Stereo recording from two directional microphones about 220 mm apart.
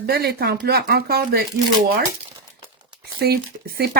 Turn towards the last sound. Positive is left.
turn(degrees=-45)  # may be behind; listen again after turning